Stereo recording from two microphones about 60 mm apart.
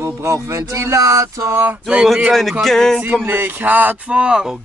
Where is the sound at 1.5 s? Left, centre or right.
Right.